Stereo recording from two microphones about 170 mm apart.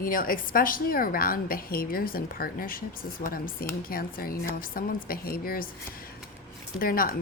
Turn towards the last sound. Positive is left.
turn(degrees=60)  # may be behind; listen again after turning